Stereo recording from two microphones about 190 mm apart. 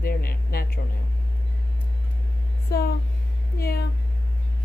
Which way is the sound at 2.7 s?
55° left (ahead or behind).